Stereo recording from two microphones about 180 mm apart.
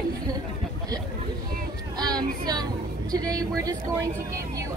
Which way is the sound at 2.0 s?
20° right (ahead or behind).